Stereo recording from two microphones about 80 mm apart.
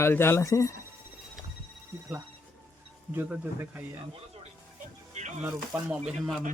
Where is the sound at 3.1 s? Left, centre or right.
Right.